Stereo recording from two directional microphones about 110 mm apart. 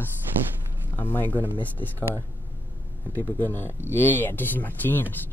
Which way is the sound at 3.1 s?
20° left (ahead or behind).